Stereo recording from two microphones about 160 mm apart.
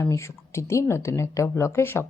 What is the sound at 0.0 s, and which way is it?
A woman's voice, 15° left (ahead or behind).